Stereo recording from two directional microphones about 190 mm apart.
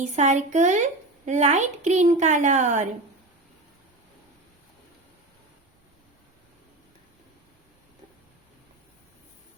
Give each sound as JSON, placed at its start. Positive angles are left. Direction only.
{"t": 0.0, "sound": "speech", "side_deg": -40}